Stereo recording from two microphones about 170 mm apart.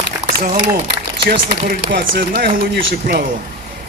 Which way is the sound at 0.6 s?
70° right (ahead or behind).